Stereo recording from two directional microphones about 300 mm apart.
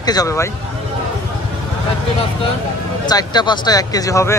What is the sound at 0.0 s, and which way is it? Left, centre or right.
Speech, centre.